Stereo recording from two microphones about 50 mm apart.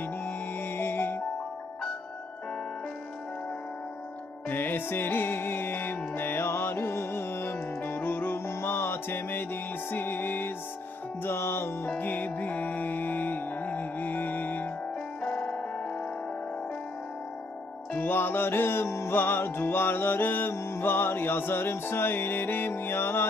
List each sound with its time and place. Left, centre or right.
0.0 s music: left
4.5 s music: left
11.2 s music: left
12.0 s music: left
15.4 s tick-tock: left
17.9 s music: left
19.1 s music: left